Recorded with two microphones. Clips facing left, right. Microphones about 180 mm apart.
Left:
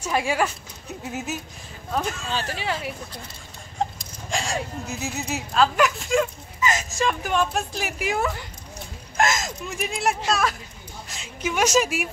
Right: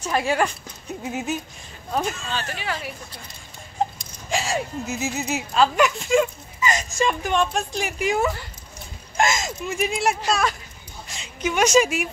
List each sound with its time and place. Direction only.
0.0 s speech: 10° left (ahead or behind)
1.9 s speech: 10° right (ahead or behind)
2.5 s speech: 25° left (ahead or behind)
4.0 s a woman's voice: 5° right (ahead or behind)